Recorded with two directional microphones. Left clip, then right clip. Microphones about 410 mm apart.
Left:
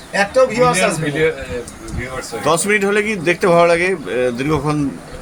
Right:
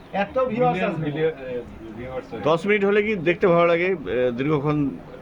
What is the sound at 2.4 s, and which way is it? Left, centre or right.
Speech, right.